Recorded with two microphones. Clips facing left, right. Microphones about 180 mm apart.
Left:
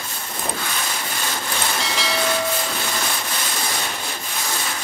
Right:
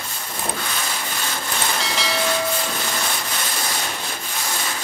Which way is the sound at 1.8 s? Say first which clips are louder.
Even; centre (ahead or behind).